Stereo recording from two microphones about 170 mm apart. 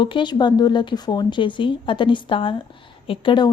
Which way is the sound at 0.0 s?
30° left (ahead or behind).